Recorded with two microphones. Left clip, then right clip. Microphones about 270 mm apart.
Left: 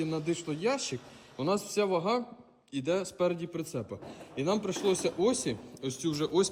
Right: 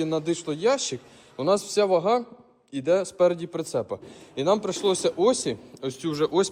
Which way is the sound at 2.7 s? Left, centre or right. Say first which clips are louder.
Right 8 dB; centre.